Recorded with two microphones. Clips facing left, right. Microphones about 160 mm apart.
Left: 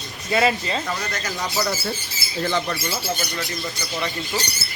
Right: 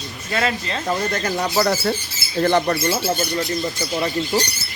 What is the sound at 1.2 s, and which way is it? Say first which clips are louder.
Speech: right 5 dB; 55° right (ahead or behind).